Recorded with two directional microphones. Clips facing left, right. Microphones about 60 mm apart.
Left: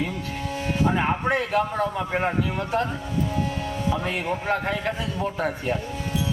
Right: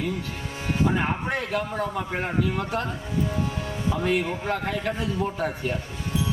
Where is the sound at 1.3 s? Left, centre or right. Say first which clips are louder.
Left 4 dB; left.